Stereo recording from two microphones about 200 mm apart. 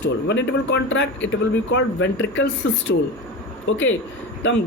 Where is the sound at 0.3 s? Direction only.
65° left (ahead or behind).